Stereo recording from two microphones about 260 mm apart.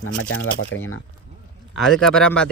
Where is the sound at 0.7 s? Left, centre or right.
Left.